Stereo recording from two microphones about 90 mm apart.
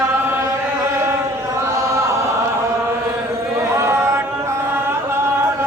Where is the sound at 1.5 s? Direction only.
30° right (ahead or behind).